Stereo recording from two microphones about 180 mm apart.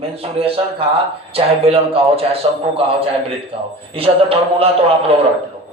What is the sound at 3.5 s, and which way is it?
A man's voice, 35° right (ahead or behind).